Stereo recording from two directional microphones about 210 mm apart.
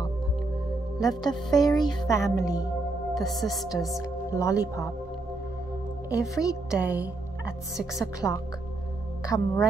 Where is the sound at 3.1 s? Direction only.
Centre (ahead or behind).